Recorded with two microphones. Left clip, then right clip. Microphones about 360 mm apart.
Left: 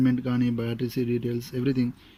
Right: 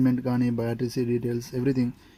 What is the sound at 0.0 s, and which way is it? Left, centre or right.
A man's voice, centre.